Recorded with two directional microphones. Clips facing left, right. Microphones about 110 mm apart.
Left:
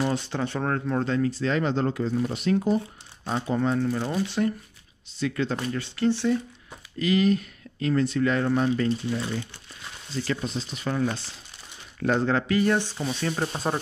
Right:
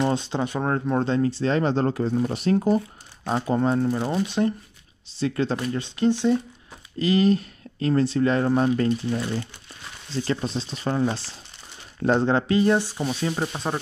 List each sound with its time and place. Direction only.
0.0 s speech: 20° right (ahead or behind)
5.7 s speech: 20° right (ahead or behind)
7.0 s speech: 30° right (ahead or behind)
10.2 s speech: 30° right (ahead or behind); by 13.5 s 10° right (ahead or behind)
13.5 s speech: centre (ahead or behind)